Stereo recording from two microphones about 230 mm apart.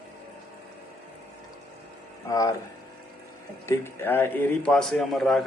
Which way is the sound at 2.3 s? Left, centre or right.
Centre.